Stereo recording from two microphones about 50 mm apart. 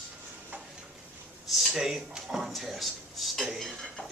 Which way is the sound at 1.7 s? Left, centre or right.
Centre.